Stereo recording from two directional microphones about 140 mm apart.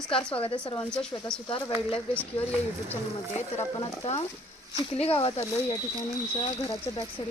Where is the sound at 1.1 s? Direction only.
25° left (ahead or behind).